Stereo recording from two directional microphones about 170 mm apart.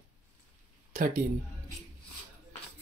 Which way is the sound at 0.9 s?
55° right (ahead or behind).